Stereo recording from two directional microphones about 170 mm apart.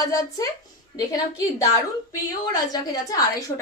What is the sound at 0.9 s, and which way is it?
Speech, 30° left (ahead or behind).